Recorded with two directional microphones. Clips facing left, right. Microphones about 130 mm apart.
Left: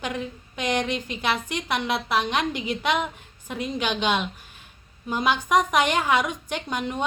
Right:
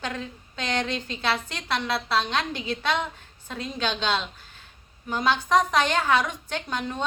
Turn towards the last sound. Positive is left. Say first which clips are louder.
# left 2 dB
turn(degrees=15)  # may be behind; listen again after turning